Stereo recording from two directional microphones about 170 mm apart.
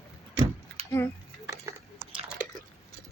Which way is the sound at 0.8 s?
35° right (ahead or behind).